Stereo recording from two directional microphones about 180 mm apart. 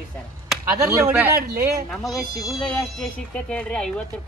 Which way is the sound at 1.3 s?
55° right (ahead or behind).